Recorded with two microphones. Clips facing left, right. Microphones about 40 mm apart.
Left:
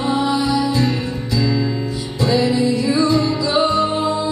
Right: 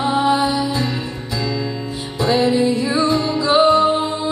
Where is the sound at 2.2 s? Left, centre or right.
Right.